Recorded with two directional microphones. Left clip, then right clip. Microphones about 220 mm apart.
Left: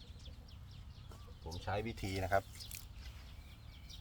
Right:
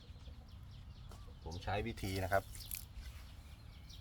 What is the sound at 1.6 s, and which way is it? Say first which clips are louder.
Speech: even; 10° right (ahead or behind).